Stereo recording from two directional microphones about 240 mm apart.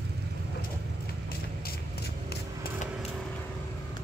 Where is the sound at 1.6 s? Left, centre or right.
Left.